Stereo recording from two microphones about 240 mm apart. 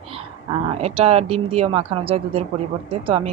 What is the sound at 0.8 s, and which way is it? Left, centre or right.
A woman's voice, right.